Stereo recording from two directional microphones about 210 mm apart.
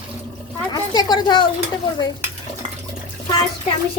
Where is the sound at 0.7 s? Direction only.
20° left (ahead or behind).